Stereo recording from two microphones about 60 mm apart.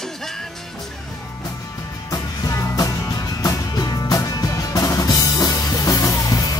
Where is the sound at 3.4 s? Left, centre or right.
Left.